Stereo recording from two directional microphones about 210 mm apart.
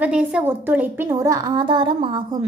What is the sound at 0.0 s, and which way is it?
A woman's voice, 5° right (ahead or behind).